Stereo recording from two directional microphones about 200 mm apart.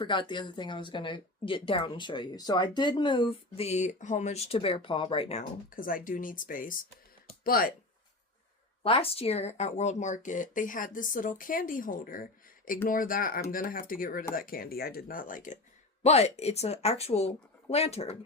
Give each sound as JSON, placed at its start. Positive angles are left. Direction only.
{"t": 0.0, "sound": "speech", "side_deg": 25}
{"t": 8.8, "sound": "speech", "side_deg": 30}